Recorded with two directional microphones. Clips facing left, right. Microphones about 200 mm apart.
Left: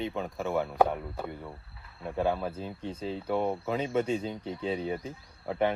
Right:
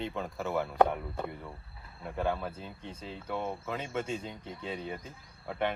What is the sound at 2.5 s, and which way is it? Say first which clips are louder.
Speech: left 7 dB; 30° left (ahead or behind).